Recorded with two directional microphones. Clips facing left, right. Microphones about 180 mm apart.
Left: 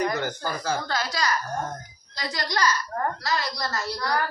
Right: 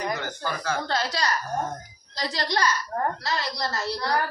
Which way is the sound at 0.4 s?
40° left (ahead or behind).